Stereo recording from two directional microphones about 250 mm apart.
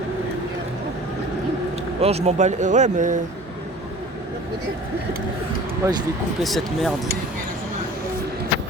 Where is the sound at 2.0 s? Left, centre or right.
Right.